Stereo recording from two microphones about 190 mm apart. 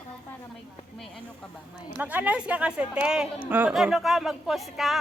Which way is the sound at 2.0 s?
10° right (ahead or behind).